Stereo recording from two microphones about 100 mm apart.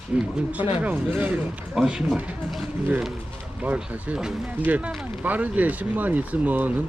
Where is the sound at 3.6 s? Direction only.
15° right (ahead or behind).